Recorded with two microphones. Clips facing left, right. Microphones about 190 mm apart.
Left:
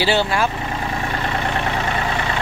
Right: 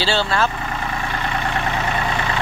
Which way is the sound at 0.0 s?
15° left (ahead or behind).